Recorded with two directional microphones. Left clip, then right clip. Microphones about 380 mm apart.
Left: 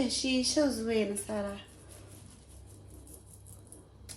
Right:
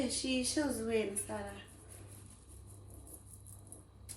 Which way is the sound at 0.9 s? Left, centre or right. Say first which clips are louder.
Left 4 dB; left.